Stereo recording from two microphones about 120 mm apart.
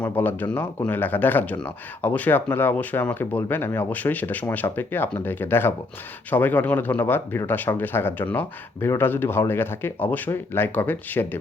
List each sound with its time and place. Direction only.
0.0 s speech: 15° left (ahead or behind)